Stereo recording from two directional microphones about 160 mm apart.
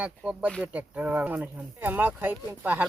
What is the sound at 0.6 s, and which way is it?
Speech, 10° right (ahead or behind).